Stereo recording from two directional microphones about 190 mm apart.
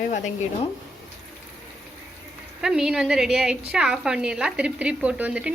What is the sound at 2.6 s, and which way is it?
A woman's voice, 5° right (ahead or behind).